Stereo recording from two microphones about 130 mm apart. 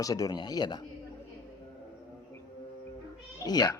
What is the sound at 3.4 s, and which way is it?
Speech, 30° left (ahead or behind).